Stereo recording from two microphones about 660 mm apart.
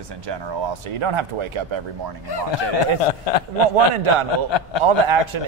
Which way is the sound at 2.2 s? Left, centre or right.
Left.